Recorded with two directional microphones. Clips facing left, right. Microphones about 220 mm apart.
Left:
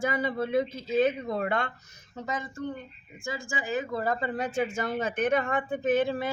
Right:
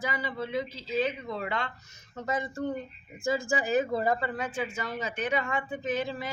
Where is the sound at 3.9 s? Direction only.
15° right (ahead or behind).